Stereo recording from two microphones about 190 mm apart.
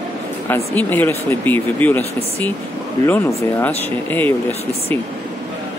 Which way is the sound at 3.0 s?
15° left (ahead or behind).